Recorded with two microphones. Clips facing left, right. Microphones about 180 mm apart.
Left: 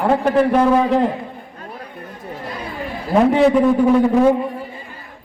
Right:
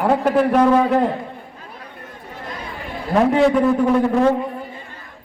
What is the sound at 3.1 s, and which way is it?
A man's voice, centre (ahead or behind).